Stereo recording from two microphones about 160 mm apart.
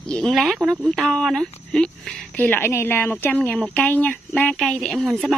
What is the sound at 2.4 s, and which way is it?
Speech, 10° left (ahead or behind).